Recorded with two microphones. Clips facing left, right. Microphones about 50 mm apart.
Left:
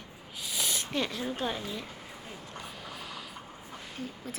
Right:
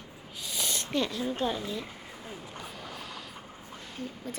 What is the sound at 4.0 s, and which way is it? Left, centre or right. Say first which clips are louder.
Speech: right 2 dB; centre.